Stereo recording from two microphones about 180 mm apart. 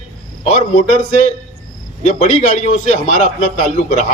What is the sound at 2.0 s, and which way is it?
A man's voice, 40° left (ahead or behind).